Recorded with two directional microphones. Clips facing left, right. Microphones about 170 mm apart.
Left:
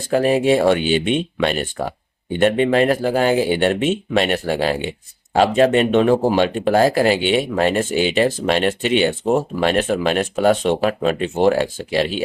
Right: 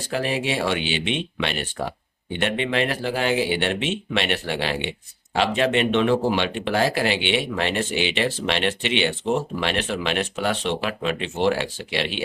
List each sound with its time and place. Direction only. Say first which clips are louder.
0.1 s speech: left 10 dB; 45° left (ahead or behind)